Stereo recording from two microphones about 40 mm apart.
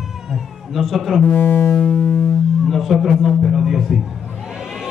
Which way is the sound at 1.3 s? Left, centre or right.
Left.